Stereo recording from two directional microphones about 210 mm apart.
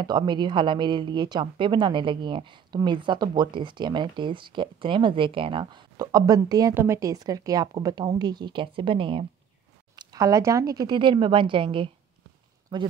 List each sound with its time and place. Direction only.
0.0 s a woman's voice: 20° right (ahead or behind)